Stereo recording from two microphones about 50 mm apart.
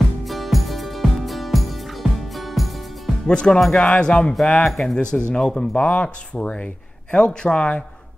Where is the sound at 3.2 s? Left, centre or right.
Centre.